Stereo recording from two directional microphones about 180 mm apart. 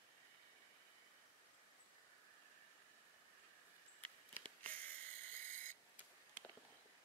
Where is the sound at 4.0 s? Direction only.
10° left (ahead or behind).